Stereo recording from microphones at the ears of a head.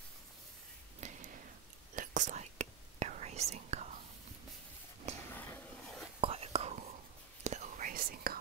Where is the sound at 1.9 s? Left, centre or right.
Right.